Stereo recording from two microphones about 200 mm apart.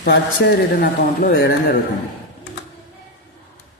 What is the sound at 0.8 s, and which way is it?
Speech, 50° left (ahead or behind).